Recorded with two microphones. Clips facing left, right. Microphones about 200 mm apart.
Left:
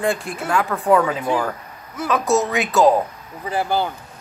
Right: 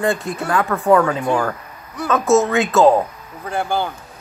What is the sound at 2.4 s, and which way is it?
Speech, 15° left (ahead or behind).